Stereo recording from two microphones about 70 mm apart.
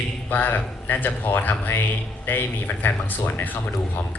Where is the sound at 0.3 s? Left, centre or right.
Left.